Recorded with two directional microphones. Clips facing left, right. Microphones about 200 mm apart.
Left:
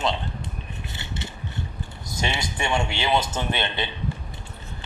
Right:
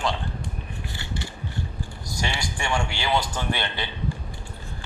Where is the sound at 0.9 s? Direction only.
20° left (ahead or behind).